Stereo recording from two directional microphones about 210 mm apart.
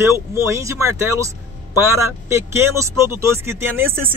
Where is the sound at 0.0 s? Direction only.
10° right (ahead or behind).